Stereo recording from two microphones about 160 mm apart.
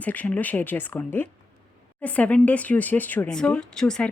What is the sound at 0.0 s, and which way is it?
Speech, 10° left (ahead or behind).